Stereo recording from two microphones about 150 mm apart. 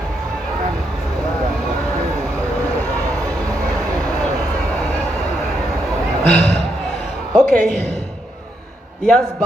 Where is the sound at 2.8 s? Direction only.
20° right (ahead or behind).